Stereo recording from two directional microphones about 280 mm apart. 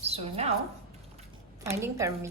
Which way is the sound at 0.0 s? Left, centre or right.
Right.